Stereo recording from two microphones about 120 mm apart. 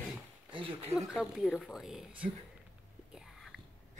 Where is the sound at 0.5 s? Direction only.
45° right (ahead or behind).